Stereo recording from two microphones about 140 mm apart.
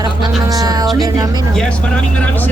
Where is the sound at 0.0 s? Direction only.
30° right (ahead or behind).